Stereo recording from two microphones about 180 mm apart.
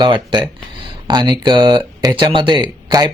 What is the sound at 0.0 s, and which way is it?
Speech, 25° right (ahead or behind).